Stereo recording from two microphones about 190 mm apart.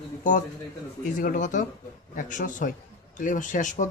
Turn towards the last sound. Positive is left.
turn(degrees=40)  # may be behind; listen again after turning